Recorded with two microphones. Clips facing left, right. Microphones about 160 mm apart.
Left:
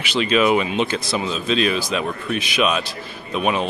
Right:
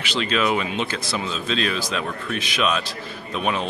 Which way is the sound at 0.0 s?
15° left (ahead or behind).